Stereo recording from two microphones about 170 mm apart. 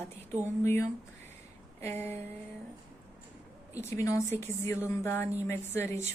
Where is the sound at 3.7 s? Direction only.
20° left (ahead or behind).